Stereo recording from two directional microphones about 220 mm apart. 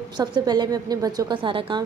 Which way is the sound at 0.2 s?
20° right (ahead or behind).